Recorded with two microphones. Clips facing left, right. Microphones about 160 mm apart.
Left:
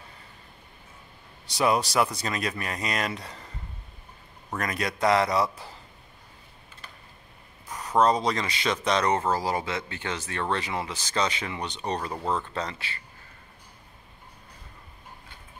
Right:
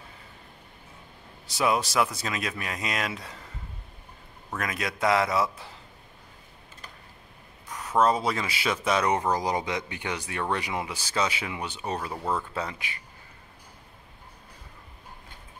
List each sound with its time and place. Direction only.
1.5 s speech: centre (ahead or behind)
4.6 s speech: centre (ahead or behind)
7.7 s speech: centre (ahead or behind)